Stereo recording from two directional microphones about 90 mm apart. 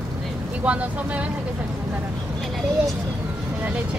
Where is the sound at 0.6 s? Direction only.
15° right (ahead or behind).